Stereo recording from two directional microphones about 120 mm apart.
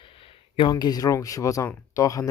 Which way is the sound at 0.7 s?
35° left (ahead or behind).